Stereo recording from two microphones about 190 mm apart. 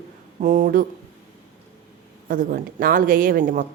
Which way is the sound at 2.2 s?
45° right (ahead or behind).